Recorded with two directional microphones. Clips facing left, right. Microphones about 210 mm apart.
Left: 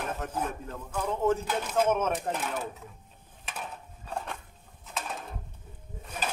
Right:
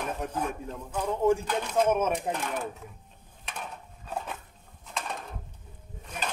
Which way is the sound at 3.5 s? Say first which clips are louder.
Even; 5° left (ahead or behind).